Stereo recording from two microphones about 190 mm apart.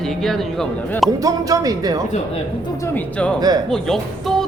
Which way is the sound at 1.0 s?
20° right (ahead or behind).